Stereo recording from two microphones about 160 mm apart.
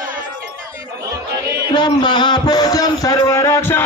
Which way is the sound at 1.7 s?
25° left (ahead or behind).